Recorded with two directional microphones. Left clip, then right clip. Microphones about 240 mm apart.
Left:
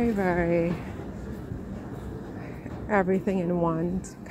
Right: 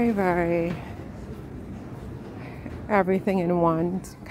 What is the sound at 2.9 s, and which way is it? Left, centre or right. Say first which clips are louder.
Speech: right 2 dB; centre.